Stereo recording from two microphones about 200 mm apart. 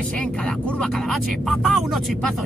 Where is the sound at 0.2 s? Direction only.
5° left (ahead or behind).